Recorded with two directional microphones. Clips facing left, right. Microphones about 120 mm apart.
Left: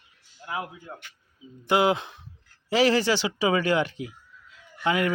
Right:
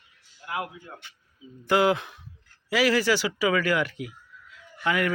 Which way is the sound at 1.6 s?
20° left (ahead or behind).